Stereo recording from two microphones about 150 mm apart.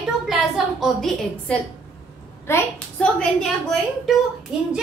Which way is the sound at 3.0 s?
5° left (ahead or behind).